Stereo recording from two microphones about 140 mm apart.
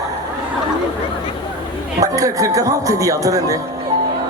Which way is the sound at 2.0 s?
25° right (ahead or behind).